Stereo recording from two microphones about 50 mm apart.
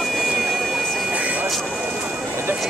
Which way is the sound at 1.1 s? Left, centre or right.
Right.